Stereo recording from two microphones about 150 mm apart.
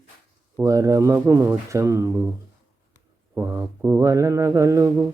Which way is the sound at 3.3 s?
20° right (ahead or behind).